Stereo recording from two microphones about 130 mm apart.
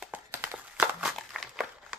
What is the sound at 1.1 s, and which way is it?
Crumpling, centre (ahead or behind).